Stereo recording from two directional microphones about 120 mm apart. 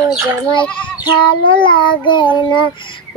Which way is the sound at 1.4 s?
45° left (ahead or behind).